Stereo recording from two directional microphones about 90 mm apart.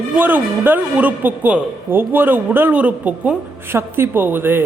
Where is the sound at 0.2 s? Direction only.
20° right (ahead or behind).